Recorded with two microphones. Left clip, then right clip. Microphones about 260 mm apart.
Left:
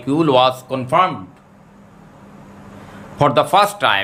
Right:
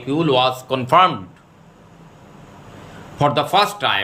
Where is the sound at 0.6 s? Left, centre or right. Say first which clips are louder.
Right 2 dB; centre.